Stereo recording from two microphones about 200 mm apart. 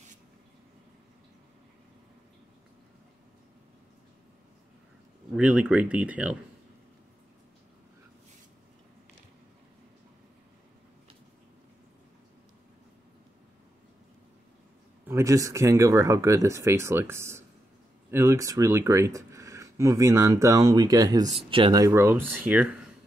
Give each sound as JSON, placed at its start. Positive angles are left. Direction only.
{"t": 5.3, "sound": "speech", "side_deg": -5}
{"t": 15.0, "sound": "speech", "side_deg": -15}